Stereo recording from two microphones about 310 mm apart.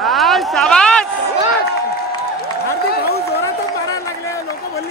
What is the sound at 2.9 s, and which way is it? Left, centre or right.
Run, left.